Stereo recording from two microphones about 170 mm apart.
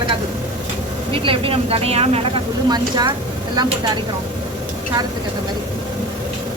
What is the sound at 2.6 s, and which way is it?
Speech, 25° right (ahead or behind).